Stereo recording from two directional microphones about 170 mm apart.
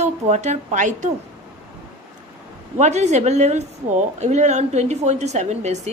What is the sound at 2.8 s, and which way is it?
A woman's voice, 45° right (ahead or behind).